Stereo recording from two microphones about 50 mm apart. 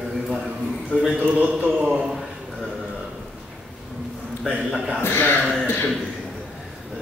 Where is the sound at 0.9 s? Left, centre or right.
Centre.